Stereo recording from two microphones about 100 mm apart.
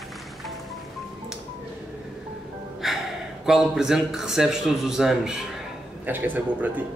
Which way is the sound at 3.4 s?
5° right (ahead or behind).